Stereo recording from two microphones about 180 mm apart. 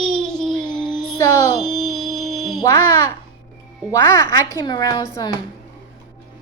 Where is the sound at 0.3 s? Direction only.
5° left (ahead or behind).